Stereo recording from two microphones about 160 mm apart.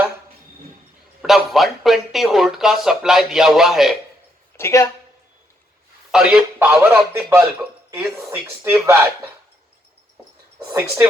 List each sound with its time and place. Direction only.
1.2 s speech: centre (ahead or behind)
4.5 s speech: 15° left (ahead or behind)
6.1 s a man's voice: 5° right (ahead or behind)
10.7 s speech: 15° right (ahead or behind)